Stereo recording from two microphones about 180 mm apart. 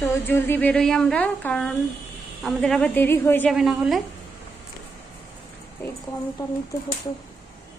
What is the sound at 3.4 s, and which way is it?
Speech, centre (ahead or behind).